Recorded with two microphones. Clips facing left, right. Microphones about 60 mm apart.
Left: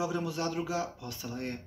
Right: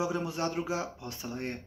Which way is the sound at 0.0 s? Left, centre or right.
Right.